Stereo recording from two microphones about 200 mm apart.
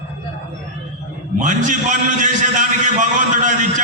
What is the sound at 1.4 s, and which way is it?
Speech, 40° right (ahead or behind).